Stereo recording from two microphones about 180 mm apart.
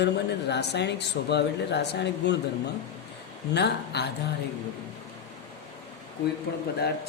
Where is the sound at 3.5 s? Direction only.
70° left (ahead or behind).